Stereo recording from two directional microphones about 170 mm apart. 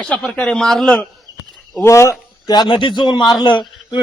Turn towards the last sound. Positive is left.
turn(degrees=25)  # may be behind; listen again after turning